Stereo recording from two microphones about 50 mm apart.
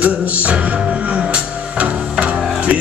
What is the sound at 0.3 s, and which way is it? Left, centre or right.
Music, right.